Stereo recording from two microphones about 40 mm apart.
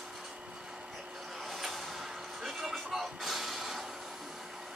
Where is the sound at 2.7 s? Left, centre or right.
Centre.